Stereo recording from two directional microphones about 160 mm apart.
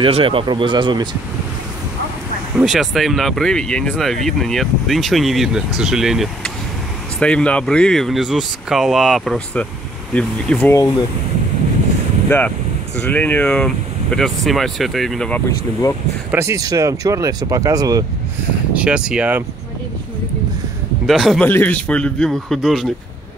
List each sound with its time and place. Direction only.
0.0 s speech: 35° right (ahead or behind)
2.5 s a man's voice: centre (ahead or behind)
12.3 s a man's voice: 10° left (ahead or behind)
16.3 s speech: 15° right (ahead or behind)
18.7 s speech: 5° right (ahead or behind)
21.1 s speech: centre (ahead or behind)
21.5 s a man's voice: 10° left (ahead or behind)